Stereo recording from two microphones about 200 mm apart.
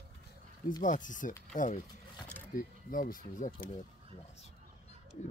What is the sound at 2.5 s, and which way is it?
Speech, 45° left (ahead or behind).